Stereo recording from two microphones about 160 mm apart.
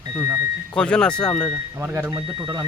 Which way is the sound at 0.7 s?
5° left (ahead or behind).